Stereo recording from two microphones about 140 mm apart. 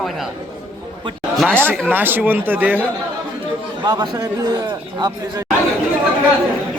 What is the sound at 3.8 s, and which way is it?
A man's voice, 30° right (ahead or behind).